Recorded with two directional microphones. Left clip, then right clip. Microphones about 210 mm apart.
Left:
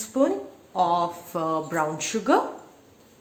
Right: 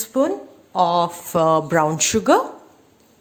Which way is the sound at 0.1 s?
40° right (ahead or behind).